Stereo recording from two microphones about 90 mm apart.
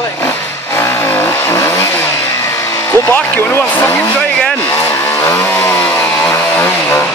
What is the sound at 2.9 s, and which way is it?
Speech, 25° left (ahead or behind).